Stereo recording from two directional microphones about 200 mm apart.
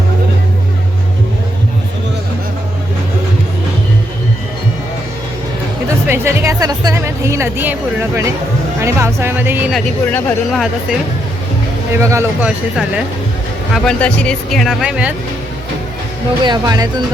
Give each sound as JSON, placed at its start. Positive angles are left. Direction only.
{"t": 6.1, "sound": "speech", "side_deg": -15}
{"t": 9.7, "sound": "speech", "side_deg": 5}
{"t": 11.9, "sound": "speech", "side_deg": -15}
{"t": 13.7, "sound": "speech", "side_deg": 5}
{"t": 16.4, "sound": "speech", "side_deg": -20}